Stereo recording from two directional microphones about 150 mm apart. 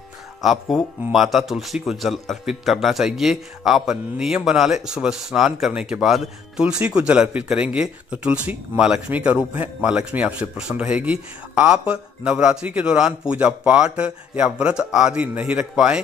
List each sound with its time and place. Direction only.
0.4 s speech: centre (ahead or behind)